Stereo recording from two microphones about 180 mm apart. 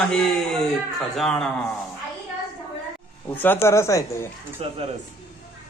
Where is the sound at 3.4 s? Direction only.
10° left (ahead or behind).